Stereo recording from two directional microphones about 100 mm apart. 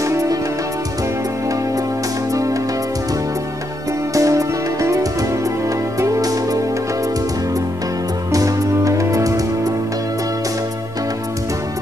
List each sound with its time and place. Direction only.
0.0 s music: 35° right (ahead or behind)
4.1 s music: 35° right (ahead or behind)
8.3 s music: 35° right (ahead or behind)